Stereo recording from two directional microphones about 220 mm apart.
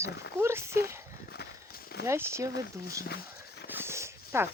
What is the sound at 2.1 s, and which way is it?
Speech, 10° right (ahead or behind).